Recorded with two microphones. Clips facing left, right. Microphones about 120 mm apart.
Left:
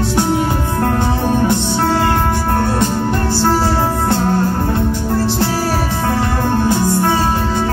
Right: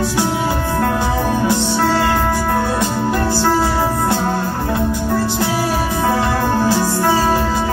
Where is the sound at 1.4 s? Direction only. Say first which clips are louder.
Even; 25° left (ahead or behind).